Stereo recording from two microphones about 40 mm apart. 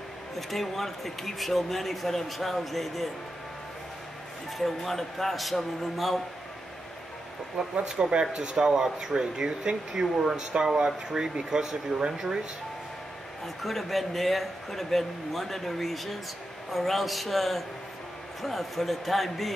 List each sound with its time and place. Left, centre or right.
0.4 s speech: centre
4.6 s speech: centre
7.5 s speech: right
13.6 s speech: centre